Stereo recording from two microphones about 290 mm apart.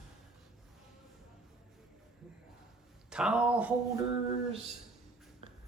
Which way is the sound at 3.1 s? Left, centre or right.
Centre.